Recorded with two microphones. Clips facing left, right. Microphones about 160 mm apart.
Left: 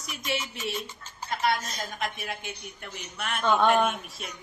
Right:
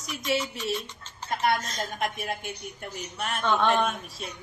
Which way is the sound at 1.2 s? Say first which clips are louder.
Right 1 dB; 50° right (ahead or behind).